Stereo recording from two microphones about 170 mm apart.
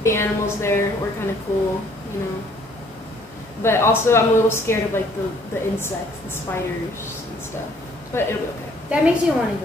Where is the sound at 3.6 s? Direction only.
15° left (ahead or behind).